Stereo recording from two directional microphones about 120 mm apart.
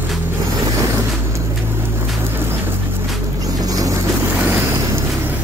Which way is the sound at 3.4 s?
30° right (ahead or behind).